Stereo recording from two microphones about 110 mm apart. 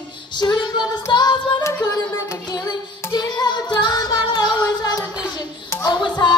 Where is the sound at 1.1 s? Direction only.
45° left (ahead or behind).